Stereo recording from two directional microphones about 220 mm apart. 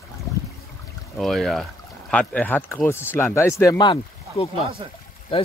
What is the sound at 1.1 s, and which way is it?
Speech, centre (ahead or behind).